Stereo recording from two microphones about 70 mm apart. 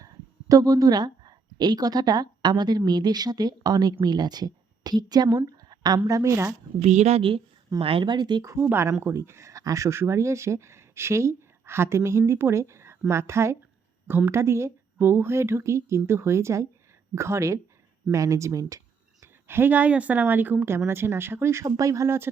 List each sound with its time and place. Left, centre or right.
0.0 s speech: right
4.0 s a woman's voice: right
5.5 s a sound: right
6.1 s a woman's voice: right
7.7 s speech: right
8.6 s speech: right
15.0 s speech: right
19.2 s speech: right
20.7 s speech: right